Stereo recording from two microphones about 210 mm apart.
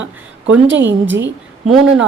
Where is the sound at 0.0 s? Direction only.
65° right (ahead or behind).